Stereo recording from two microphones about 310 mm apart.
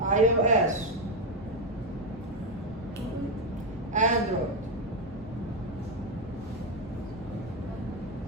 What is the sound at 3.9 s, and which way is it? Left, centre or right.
Speech, right.